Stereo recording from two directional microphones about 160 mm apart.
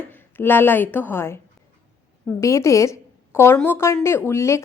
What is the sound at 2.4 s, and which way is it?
A woman's voice, 20° left (ahead or behind).